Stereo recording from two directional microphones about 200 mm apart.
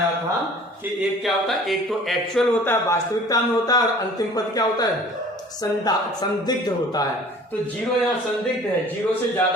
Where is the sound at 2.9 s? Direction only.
20° left (ahead or behind).